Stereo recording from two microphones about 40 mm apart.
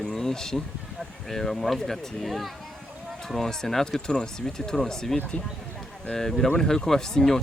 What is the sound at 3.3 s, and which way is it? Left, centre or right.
Speech, centre.